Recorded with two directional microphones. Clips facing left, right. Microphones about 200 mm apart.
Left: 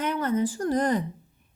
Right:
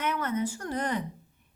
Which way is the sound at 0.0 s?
30° left (ahead or behind).